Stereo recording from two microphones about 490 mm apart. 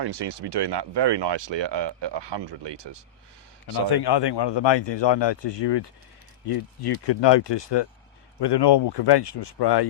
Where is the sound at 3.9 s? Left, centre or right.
Left.